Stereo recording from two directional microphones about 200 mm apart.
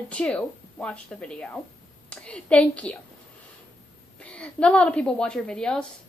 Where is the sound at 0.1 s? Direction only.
5° left (ahead or behind).